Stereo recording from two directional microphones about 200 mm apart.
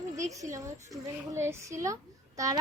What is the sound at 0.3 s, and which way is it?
A child's voice, 15° right (ahead or behind).